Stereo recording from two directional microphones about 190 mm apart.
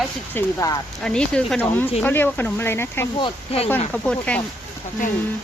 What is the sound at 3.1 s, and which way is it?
Speech, 30° left (ahead or behind).